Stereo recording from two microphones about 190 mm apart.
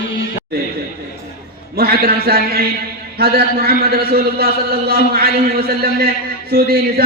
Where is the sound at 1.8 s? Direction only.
55° right (ahead or behind).